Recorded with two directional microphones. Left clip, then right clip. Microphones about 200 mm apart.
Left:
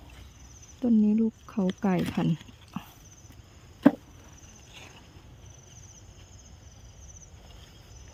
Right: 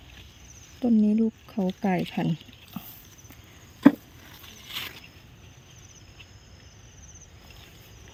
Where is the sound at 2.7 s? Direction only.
15° left (ahead or behind).